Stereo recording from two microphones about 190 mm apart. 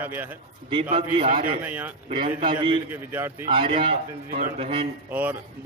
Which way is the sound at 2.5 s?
25° right (ahead or behind).